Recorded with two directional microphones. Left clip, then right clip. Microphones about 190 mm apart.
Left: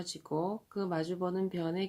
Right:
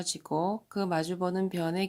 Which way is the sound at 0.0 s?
30° right (ahead or behind).